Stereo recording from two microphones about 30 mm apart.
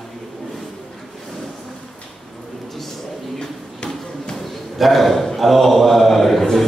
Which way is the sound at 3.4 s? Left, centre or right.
Left.